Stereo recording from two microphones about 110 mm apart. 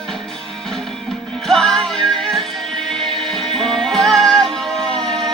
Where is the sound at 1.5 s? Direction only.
5° left (ahead or behind).